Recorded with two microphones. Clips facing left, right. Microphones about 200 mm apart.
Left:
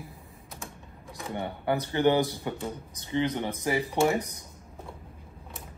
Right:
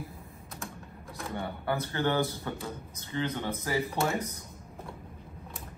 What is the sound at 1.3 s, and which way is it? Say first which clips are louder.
Speech: left 4 dB; 15° left (ahead or behind).